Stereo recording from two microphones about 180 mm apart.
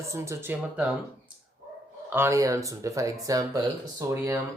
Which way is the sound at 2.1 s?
15° right (ahead or behind).